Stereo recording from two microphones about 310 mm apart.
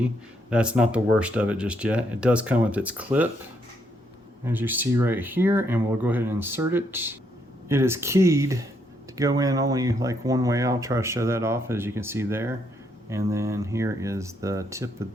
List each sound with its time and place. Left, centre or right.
0.5 s speech: centre
4.4 s speech: centre